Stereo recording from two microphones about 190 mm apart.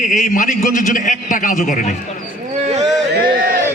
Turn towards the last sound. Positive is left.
turn(degrees=-50)  # may be behind; listen again after turning